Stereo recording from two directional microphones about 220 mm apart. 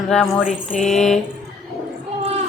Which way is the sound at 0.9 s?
Centre (ahead or behind).